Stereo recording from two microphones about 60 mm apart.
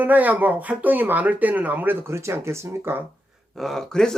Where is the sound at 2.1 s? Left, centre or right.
Right.